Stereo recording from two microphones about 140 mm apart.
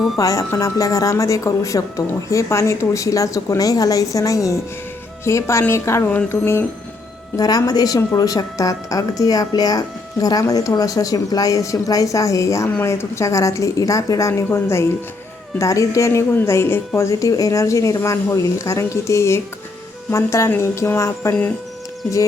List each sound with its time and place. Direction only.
0.2 s a woman's voice: 25° left (ahead or behind)
7.3 s a woman's voice: 25° left (ahead or behind)